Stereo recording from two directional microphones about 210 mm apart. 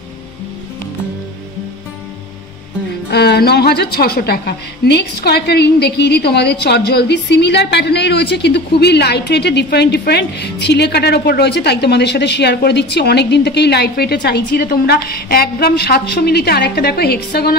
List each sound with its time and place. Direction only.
3.1 s a woman's voice: 50° left (ahead or behind)